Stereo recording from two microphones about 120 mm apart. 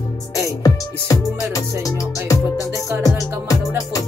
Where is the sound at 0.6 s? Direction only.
30° left (ahead or behind).